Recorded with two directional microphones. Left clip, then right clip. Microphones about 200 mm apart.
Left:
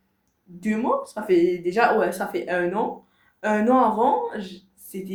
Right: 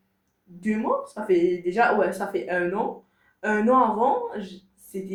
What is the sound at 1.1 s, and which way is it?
Speech, 30° left (ahead or behind).